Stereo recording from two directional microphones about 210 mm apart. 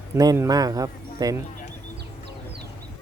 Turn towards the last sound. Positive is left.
turn(degrees=-15)  # may be behind; listen again after turning